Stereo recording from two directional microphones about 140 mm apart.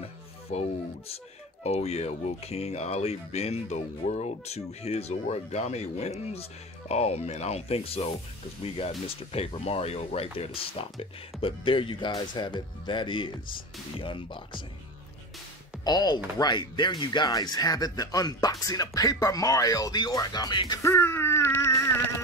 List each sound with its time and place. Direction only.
0.0 s speech: 45° left (ahead or behind)
15.8 s speech: 30° left (ahead or behind)
20.8 s a sound: 20° left (ahead or behind)